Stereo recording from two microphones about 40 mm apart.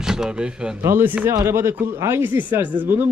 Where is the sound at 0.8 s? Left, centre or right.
Right.